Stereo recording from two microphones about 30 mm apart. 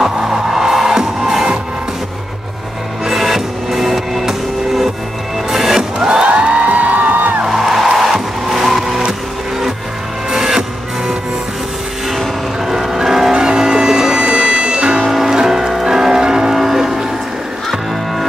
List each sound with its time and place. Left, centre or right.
0.0 s music: centre
3.1 s music: centre
5.9 s music: right
6.6 s music: right
7.1 s music: right
7.4 s music: centre
10.3 s music: centre
12.6 s music: centre
13.4 s music: right
14.2 s music: right
15.0 s music: centre
16.5 s a sound: centre